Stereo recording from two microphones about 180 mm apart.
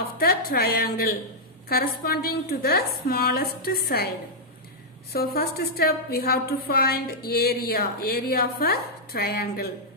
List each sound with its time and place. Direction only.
0.2 s a woman's voice: 55° left (ahead or behind)
5.1 s a woman's voice: 60° left (ahead or behind)